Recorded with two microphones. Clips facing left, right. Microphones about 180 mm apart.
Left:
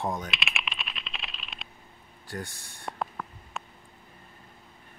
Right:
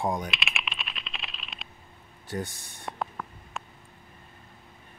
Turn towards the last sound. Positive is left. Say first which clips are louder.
# even
turn(degrees=0)  # may be behind; listen again after turning